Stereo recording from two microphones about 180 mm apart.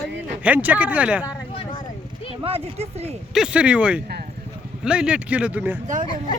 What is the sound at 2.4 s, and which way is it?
Speech, 35° right (ahead or behind).